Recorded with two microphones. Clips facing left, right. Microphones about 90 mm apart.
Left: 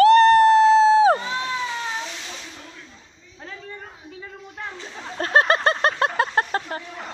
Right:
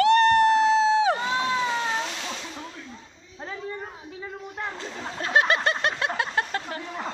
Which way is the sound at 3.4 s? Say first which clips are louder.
Right 4 dB; 20° right (ahead or behind).